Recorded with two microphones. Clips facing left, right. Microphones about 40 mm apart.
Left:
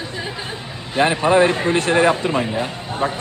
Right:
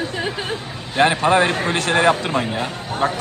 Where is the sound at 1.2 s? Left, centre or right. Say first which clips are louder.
Left 1 dB; right.